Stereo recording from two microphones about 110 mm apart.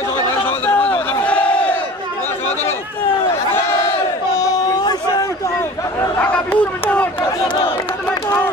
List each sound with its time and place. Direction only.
0.5 s a sound: 15° left (ahead or behind)
1.2 s crowd: 10° left (ahead or behind)
3.5 s battle cry: 25° left (ahead or behind)
4.4 s a sound: 35° left (ahead or behind)
5.9 s chatter: 20° left (ahead or behind)
7.4 s crowd: 45° left (ahead or behind)